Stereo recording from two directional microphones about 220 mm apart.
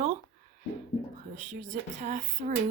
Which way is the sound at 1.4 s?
35° right (ahead or behind).